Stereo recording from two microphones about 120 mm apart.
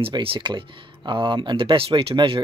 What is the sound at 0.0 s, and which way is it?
Speech, 50° right (ahead or behind).